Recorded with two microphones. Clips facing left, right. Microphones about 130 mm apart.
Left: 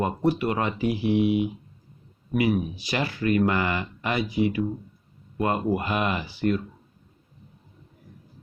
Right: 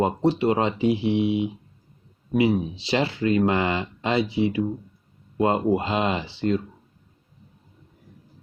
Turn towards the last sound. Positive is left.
turn(degrees=-25)  # may be behind; listen again after turning